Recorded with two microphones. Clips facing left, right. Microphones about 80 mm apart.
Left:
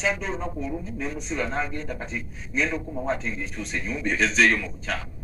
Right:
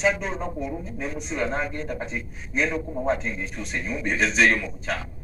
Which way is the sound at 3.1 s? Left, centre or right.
Right.